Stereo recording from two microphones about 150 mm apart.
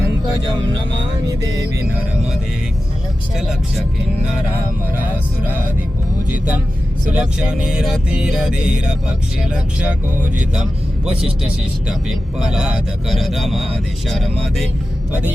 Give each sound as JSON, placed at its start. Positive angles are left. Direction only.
{"t": 1.3, "sound": "music", "side_deg": -20}
{"t": 6.3, "sound": "speech", "side_deg": -10}
{"t": 11.9, "sound": "speech", "side_deg": -5}